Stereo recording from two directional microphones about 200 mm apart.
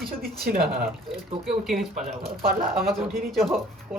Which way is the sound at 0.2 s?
50° right (ahead or behind).